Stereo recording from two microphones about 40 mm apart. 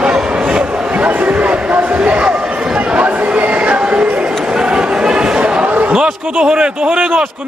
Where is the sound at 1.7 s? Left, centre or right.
Right.